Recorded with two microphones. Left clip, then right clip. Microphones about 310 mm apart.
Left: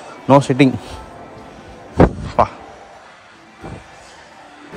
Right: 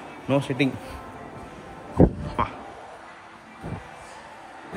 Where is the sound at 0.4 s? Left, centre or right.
Left.